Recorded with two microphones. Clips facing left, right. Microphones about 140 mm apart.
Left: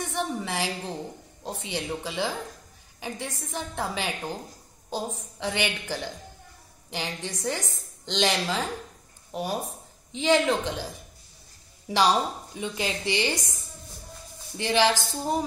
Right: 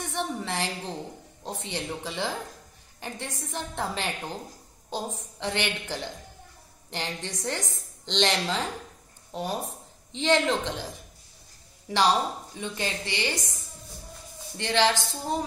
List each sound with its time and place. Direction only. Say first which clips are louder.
0.1 s a woman's voice: right 1 dB; 5° left (ahead or behind)
14.6 s a woman's voice: left 1 dB; 10° left (ahead or behind)